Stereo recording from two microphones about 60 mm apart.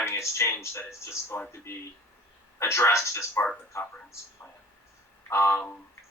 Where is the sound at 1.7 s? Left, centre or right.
Left.